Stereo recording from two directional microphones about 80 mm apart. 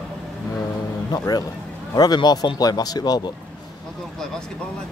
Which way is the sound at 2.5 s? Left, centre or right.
Left.